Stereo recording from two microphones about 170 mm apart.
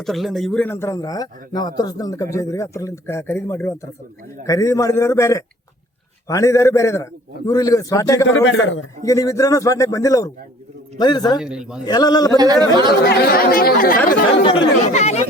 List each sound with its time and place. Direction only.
0.0 s a man's voice: centre (ahead or behind); by 8.3 s 20° left (ahead or behind)
8.3 s a man's voice: 90° left
9.0 s a man's voice: 20° left (ahead or behind)
11.3 s a man's voice: 5° right (ahead or behind)
11.9 s a man's voice: 25° left (ahead or behind)
12.4 s speech: 25° right (ahead or behind)
12.9 s speech: 65° left (ahead or behind)
14.9 s speech: 40° left (ahead or behind)